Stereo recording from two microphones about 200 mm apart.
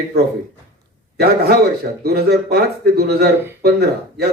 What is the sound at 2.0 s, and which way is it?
Speech, 55° right (ahead or behind).